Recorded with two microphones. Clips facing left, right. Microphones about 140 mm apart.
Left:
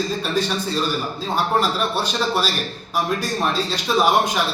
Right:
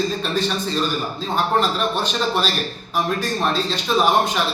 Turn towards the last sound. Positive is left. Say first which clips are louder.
# even
turn(degrees=10)  # may be behind; listen again after turning